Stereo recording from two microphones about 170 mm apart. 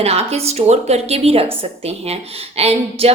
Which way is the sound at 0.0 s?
35° right (ahead or behind).